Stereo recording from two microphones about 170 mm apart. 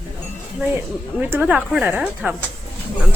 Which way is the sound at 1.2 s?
10° right (ahead or behind).